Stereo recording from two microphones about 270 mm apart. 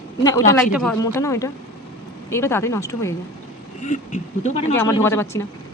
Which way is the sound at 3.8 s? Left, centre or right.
Left.